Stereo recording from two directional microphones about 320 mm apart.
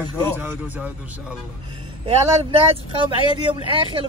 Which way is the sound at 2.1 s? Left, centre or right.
Centre.